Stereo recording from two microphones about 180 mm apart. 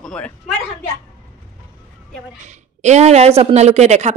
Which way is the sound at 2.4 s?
40° right (ahead or behind).